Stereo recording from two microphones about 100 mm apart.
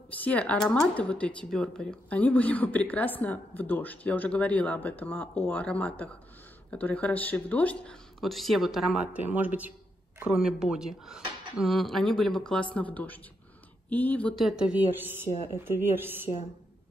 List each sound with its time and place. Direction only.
0.2 s speech: 15° left (ahead or behind)
8.2 s speech: centre (ahead or behind); by 14.3 s 15° left (ahead or behind)
14.4 s speech: 5° right (ahead or behind)
14.8 s a woman's voice: 20° right (ahead or behind)